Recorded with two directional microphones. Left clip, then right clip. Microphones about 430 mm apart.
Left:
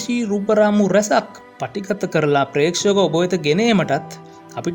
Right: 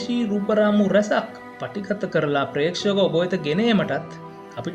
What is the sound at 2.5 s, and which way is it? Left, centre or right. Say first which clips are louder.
Speech: left 5 dB; left.